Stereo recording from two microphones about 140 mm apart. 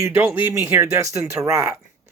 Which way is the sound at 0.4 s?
20° right (ahead or behind).